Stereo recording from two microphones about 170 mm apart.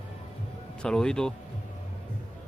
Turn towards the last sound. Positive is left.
turn(degrees=5)  # may be behind; listen again after turning